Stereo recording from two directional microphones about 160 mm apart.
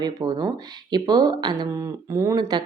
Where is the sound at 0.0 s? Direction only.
25° right (ahead or behind).